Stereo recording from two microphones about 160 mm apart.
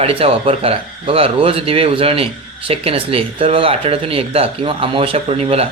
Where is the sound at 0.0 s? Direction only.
40° right (ahead or behind).